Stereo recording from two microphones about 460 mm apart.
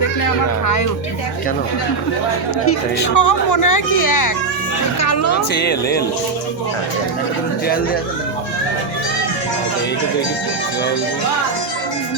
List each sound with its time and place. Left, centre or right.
0.2 s speech: left
2.6 s speech: left
5.5 s speech: left